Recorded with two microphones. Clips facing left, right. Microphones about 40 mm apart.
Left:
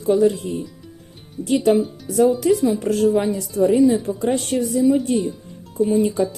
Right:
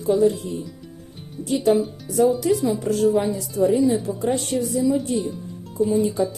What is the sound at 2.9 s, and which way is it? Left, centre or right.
Speech, left.